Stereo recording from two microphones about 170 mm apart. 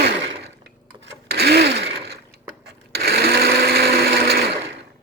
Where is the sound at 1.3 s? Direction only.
75° right (ahead or behind).